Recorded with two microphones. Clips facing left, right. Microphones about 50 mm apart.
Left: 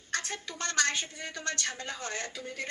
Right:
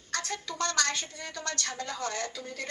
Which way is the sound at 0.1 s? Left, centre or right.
Centre.